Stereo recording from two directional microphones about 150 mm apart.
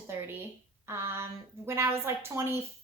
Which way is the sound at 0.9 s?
15° right (ahead or behind).